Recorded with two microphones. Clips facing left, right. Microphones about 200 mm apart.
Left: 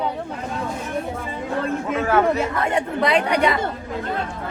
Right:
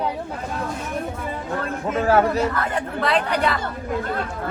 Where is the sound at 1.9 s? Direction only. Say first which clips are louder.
Right 2 dB; 35° right (ahead or behind).